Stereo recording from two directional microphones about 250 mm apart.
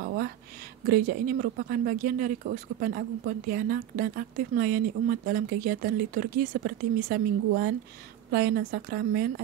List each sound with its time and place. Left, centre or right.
0.8 s speech: right